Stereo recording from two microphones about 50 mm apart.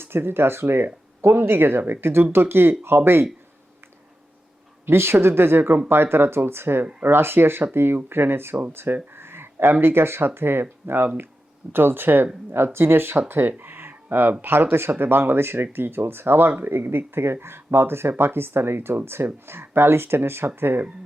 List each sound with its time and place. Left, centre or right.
0.0 s speech: right
4.9 s speech: right
9.1 s a sound: right
9.8 s speech: right
13.5 s a sound: right
14.4 s speech: right